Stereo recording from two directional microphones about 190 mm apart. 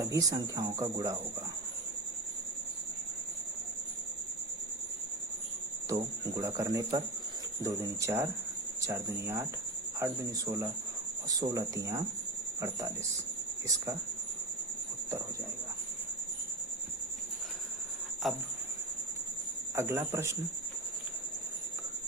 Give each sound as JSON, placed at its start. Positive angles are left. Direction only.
{"t": 0.0, "sound": "speech", "side_deg": -20}
{"t": 5.9, "sound": "speech", "side_deg": -15}
{"t": 18.2, "sound": "cricket", "side_deg": 0}
{"t": 19.7, "sound": "speech", "side_deg": -15}